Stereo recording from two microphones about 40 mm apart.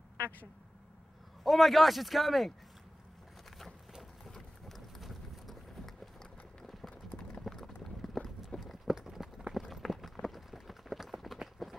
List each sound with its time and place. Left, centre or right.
1.4 s a man's voice: centre
4.2 s vehicle: centre
6.6 s clip-clop: centre
8.5 s clip-clop: left
8.8 s run: centre